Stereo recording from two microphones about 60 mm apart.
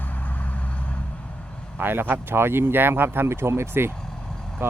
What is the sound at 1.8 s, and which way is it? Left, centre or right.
Speech, right.